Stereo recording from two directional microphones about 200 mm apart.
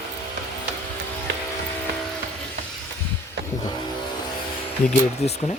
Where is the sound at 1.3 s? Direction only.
60° right (ahead or behind).